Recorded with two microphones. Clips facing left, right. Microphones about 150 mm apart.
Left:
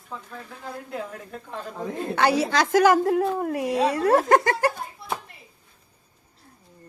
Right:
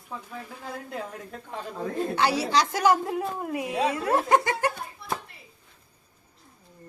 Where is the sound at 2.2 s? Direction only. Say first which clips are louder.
Left 4 dB; 50° left (ahead or behind).